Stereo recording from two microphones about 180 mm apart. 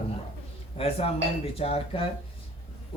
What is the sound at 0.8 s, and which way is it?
Speech, 35° left (ahead or behind).